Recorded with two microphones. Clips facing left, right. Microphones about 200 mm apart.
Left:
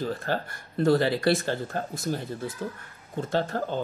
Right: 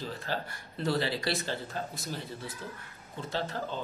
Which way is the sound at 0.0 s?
50° left (ahead or behind).